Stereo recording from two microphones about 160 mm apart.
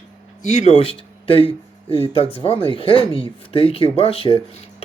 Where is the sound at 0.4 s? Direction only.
40° left (ahead or behind).